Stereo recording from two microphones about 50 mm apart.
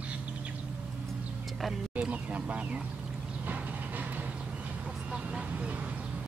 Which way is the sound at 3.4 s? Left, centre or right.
Right.